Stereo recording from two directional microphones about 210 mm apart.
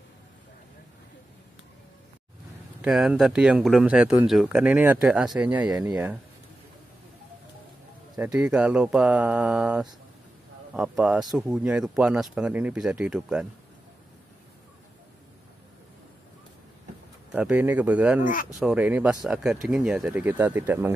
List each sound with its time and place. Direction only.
2.8 s speech: 5° right (ahead or behind)
8.2 s speech: 5° right (ahead or behind)
17.3 s speech: 10° right (ahead or behind)